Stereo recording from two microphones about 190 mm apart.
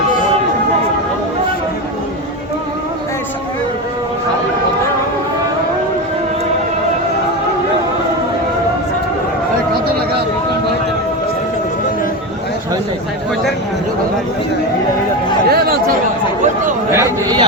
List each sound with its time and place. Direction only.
15.4 s chatter: 55° right (ahead or behind)
16.9 s chatter: 15° right (ahead or behind)